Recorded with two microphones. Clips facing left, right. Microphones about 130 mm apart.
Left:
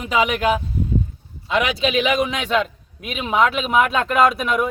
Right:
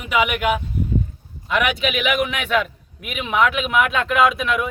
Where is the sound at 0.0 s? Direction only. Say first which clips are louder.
Left 1 dB; 30° left (ahead or behind).